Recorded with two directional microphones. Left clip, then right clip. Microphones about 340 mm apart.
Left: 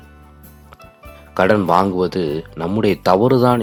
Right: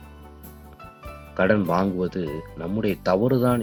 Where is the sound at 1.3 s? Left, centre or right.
Left.